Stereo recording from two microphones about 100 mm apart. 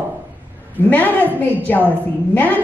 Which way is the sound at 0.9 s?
15° left (ahead or behind).